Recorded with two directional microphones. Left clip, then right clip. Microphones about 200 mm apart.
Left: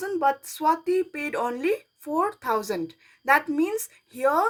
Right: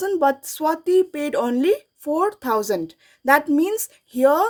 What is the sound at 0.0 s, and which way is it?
Speech, 40° right (ahead or behind).